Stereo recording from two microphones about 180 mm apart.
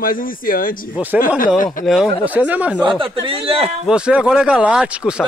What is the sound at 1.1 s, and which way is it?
Speech, 5° right (ahead or behind).